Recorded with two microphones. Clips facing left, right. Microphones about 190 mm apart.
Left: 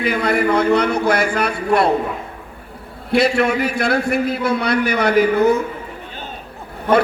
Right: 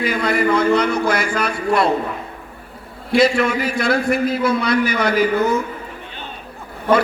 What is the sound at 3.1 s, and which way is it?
A man's voice, 60° left (ahead or behind).